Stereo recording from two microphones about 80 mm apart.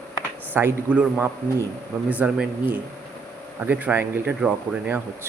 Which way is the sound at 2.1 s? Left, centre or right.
Centre.